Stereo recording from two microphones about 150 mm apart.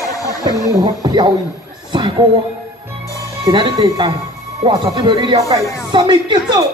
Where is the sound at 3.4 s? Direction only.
25° right (ahead or behind).